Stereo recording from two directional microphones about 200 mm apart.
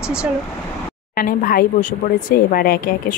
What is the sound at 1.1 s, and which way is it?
Speech, 45° left (ahead or behind).